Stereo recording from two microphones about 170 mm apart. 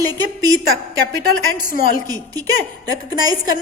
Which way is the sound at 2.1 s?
20° right (ahead or behind).